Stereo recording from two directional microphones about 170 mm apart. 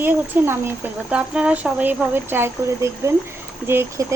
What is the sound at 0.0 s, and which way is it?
Speech, 15° right (ahead or behind).